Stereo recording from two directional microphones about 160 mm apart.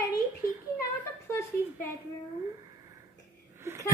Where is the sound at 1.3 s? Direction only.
15° left (ahead or behind).